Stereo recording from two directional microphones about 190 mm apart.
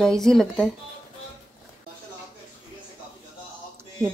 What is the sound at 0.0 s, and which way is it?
Speech, centre (ahead or behind).